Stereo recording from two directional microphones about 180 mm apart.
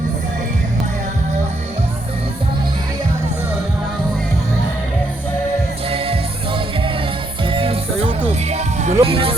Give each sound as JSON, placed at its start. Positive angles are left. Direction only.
{"t": 7.4, "sound": "music", "side_deg": -30}